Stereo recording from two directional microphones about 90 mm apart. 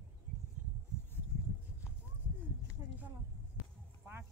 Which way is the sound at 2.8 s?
35° right (ahead or behind).